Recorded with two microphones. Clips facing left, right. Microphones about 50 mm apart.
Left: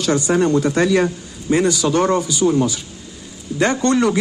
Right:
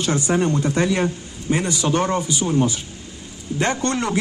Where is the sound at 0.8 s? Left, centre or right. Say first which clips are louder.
Left 4 dB; centre.